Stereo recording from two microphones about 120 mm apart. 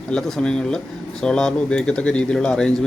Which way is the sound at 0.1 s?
5° left (ahead or behind).